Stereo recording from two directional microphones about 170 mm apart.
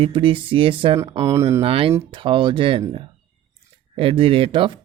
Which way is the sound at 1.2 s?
20° right (ahead or behind).